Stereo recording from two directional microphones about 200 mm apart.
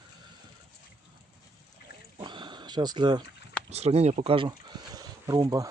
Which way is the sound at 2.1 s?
20° right (ahead or behind).